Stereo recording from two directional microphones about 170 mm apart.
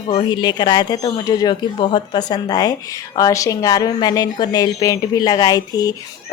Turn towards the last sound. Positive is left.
turn(degrees=20)  # may be behind; listen again after turning